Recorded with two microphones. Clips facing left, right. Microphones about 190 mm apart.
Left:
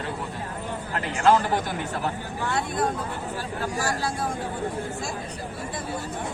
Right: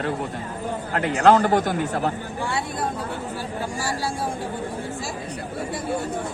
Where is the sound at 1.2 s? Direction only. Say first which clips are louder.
Right 4 dB; 60° right (ahead or behind).